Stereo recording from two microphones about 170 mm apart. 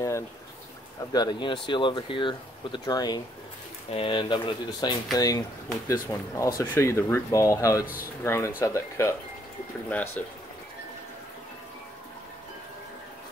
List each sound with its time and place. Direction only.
1.1 s speech: 25° left (ahead or behind); by 10.2 s 10° left (ahead or behind)